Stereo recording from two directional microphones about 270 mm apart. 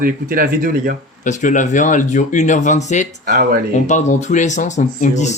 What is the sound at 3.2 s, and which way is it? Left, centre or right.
Speech, right.